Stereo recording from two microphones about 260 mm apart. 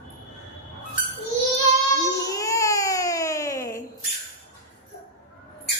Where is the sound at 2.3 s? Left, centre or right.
Centre.